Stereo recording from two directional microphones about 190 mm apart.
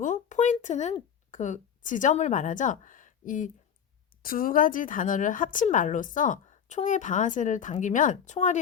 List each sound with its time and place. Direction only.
0.0 s speech: 40° left (ahead or behind)